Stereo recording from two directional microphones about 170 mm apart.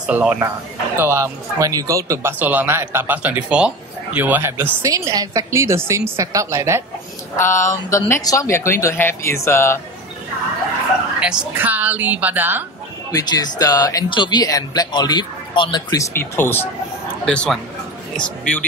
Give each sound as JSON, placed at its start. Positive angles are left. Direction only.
{"t": 0.0, "sound": "speech", "side_deg": -5}
{"t": 7.3, "sound": "speech", "side_deg": 15}
{"t": 11.1, "sound": "speech", "side_deg": -5}
{"t": 13.1, "sound": "speech", "side_deg": 25}